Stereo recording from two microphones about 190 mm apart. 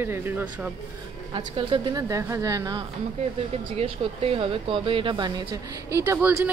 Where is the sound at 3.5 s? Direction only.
30° right (ahead or behind).